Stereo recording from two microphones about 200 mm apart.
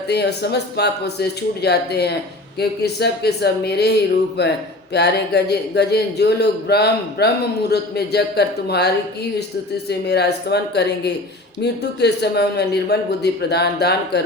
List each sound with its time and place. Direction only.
0.1 s a man's voice: 55° left (ahead or behind)
10.1 s a man's voice: 55° left (ahead or behind)